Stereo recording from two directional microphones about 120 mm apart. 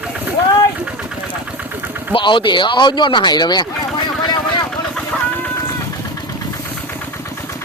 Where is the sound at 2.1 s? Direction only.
40° left (ahead or behind).